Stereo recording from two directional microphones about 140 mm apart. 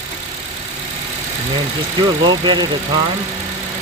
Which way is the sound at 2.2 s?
35° right (ahead or behind).